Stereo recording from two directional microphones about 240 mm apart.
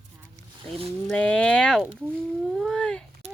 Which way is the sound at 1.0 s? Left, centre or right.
Centre.